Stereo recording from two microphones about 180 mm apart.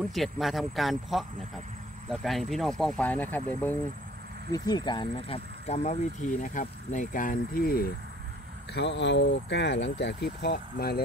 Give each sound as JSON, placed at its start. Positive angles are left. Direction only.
{"t": 0.0, "sound": "speech", "side_deg": 0}
{"t": 4.5, "sound": "speech", "side_deg": 20}
{"t": 8.7, "sound": "speech", "side_deg": 80}